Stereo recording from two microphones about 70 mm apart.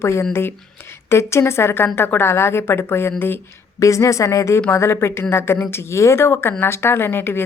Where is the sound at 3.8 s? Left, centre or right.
Left.